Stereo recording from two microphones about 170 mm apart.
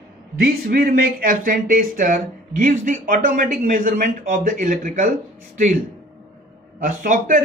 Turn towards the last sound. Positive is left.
turn(degrees=-55)  # may be behind; listen again after turning